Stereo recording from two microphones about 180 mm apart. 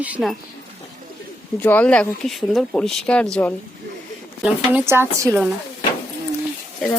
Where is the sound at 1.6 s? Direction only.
10° left (ahead or behind).